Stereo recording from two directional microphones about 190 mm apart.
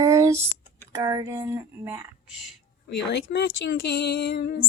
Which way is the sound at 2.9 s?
60° left (ahead or behind).